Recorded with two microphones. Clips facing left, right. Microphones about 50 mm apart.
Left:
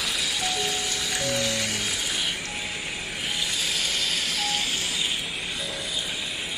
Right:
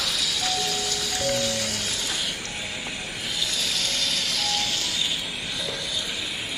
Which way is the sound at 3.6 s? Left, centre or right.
Centre.